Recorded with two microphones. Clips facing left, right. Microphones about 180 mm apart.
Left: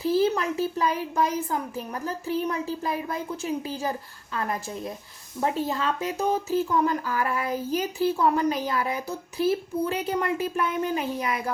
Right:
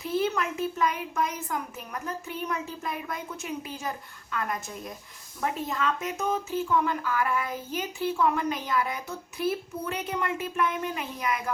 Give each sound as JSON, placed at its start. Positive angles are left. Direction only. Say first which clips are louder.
{"t": 0.0, "sound": "speech", "louder": "left 5 dB", "side_deg": 30}